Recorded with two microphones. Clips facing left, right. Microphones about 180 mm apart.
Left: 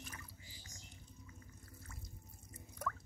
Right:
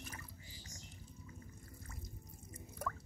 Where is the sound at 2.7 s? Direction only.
10° right (ahead or behind).